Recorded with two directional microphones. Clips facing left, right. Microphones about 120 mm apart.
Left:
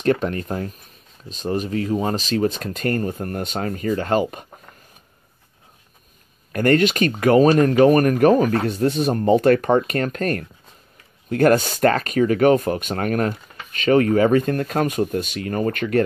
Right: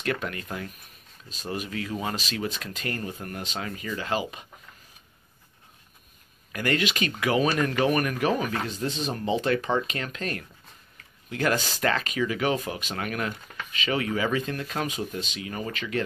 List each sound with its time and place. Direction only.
0.0 s speech: 35° left (ahead or behind)
6.5 s speech: 45° left (ahead or behind)
8.7 s speech: 60° left (ahead or behind)